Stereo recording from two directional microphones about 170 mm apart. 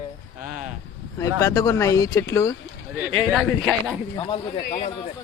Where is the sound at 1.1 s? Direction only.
20° left (ahead or behind).